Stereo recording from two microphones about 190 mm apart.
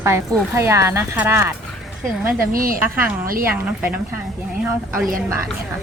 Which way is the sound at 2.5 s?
50° right (ahead or behind).